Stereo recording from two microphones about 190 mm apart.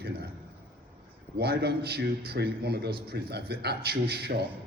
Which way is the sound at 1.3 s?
55° right (ahead or behind).